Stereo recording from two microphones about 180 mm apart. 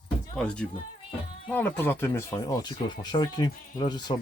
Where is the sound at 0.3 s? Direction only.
5° left (ahead or behind).